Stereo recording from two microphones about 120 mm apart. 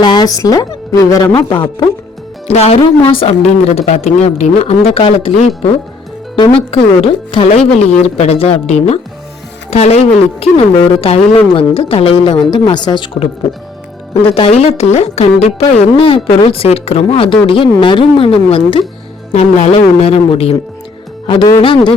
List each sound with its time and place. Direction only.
0.0 s a woman's voice: 35° left (ahead or behind)
2.5 s a woman's voice: 60° left (ahead or behind)
6.3 s speech: 45° left (ahead or behind)
14.2 s speech: 50° left (ahead or behind)
19.3 s speech: 70° left (ahead or behind)
19.7 s a woman's voice: 55° left (ahead or behind)
21.2 s speech: 40° left (ahead or behind)